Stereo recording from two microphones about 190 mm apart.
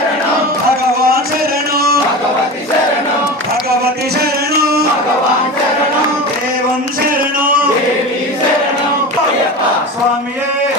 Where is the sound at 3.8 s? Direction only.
55° right (ahead or behind).